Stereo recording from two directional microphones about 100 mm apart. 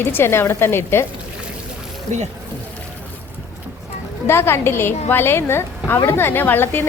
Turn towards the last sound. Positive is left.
turn(degrees=20)  # may be behind; listen again after turning